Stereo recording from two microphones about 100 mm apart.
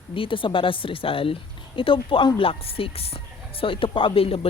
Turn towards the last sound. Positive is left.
turn(degrees=70)  # may be behind; listen again after turning